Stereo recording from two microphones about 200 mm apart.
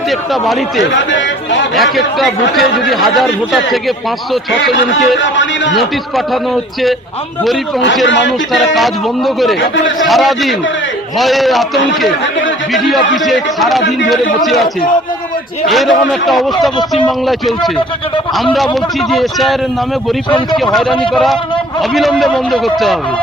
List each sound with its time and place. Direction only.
2.6 s speech: centre (ahead or behind)
8.5 s speech: centre (ahead or behind)
9.6 s speech: 70° left (ahead or behind)
10.0 s speech: centre (ahead or behind)
15.7 s speech: centre (ahead or behind)
20.3 s speech: 20° left (ahead or behind)
21.8 s speech: centre (ahead or behind)